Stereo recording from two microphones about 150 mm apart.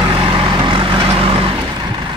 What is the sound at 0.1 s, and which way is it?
Vehicle, 35° right (ahead or behind).